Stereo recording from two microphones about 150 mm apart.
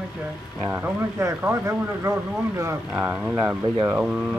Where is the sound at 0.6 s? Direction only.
15° right (ahead or behind).